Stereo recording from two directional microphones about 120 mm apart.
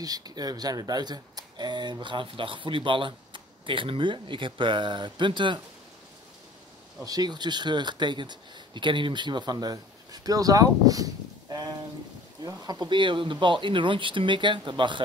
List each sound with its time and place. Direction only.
0.0 s speech: 35° right (ahead or behind)
7.1 s speech: 35° right (ahead or behind)